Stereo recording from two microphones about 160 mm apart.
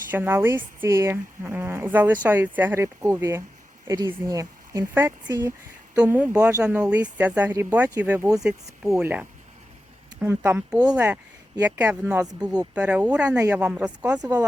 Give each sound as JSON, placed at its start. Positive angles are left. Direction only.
{"t": 0.1, "sound": "speech", "side_deg": -15}
{"t": 9.0, "sound": "speech", "side_deg": -10}
{"t": 14.2, "sound": "speech", "side_deg": -25}